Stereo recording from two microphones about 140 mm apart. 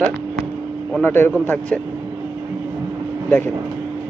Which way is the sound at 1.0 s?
15° left (ahead or behind).